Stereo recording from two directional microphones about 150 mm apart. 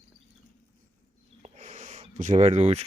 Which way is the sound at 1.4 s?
50° right (ahead or behind).